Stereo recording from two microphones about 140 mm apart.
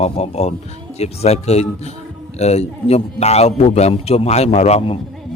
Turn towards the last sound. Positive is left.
turn(degrees=50)  # may be behind; listen again after turning